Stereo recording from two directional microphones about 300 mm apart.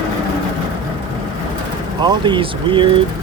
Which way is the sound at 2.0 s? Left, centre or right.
Centre.